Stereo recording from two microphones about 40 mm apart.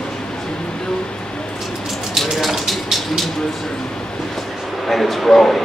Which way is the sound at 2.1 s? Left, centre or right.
Centre.